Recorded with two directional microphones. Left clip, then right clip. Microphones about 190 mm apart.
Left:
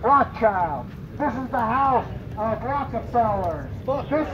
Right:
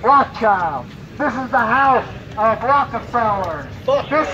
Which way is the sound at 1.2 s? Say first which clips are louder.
Right 7 dB; 45° right (ahead or behind).